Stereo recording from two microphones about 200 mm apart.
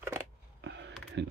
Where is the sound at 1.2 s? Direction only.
60° right (ahead or behind).